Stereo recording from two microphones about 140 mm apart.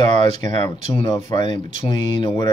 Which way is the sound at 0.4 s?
35° left (ahead or behind).